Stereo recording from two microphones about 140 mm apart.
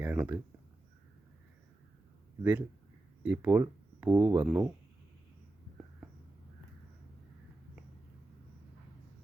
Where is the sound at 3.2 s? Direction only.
10° right (ahead or behind).